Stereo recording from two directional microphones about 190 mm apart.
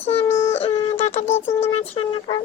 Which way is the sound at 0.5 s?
30° left (ahead or behind).